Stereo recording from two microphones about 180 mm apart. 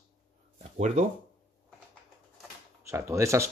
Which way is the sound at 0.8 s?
40° right (ahead or behind).